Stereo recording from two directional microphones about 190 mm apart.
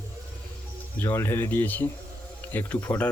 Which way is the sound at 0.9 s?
10° left (ahead or behind).